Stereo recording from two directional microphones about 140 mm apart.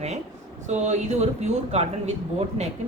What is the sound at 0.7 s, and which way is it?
A woman's voice, 55° right (ahead or behind).